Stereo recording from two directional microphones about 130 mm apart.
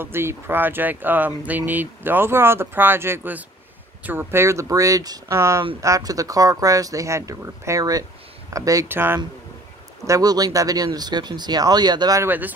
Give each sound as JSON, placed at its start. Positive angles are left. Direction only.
{"t": 0.0, "sound": "speech", "side_deg": -20}
{"t": 10.0, "sound": "speech", "side_deg": -25}
{"t": 12.2, "sound": "speech", "side_deg": -15}